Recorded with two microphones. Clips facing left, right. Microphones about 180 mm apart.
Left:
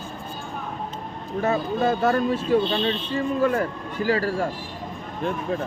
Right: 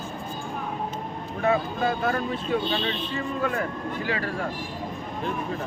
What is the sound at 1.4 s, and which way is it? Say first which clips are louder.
A man's voice: left 1 dB; 40° left (ahead or behind).